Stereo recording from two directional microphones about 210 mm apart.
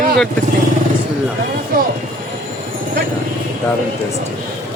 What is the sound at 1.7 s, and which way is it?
Train, 45° right (ahead or behind).